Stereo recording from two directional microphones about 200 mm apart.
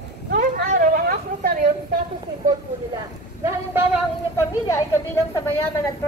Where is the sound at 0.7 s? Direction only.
45° right (ahead or behind).